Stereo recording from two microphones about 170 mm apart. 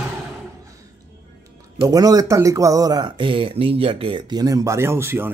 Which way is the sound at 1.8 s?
20° right (ahead or behind).